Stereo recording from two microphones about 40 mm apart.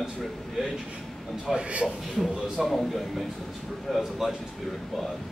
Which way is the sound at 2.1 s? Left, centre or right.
Centre.